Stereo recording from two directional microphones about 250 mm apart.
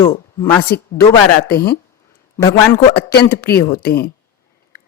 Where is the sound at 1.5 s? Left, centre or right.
Left.